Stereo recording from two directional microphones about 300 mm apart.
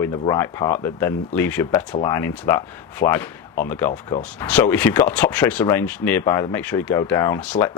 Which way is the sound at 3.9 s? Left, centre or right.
Left.